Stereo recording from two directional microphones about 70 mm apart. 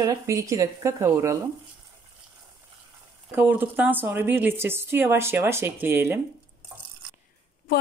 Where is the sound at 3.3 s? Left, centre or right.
Right.